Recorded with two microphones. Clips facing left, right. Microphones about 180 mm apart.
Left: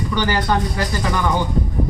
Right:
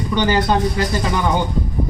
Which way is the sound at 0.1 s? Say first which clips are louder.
Right 4 dB; 20° right (ahead or behind).